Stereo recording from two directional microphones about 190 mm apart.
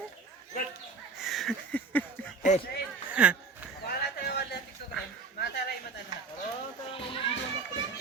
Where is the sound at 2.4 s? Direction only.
40° left (ahead or behind).